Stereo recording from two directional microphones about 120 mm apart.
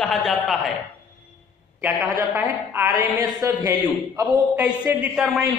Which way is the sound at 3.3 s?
30° right (ahead or behind).